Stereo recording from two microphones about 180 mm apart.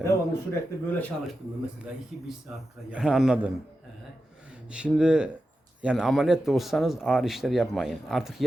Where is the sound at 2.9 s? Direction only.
5° right (ahead or behind).